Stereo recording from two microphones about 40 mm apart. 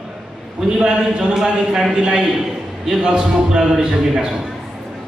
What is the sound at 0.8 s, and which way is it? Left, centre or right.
A man's voice, right.